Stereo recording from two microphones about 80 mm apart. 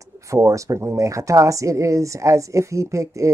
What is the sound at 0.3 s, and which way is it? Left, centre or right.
A man's voice, right.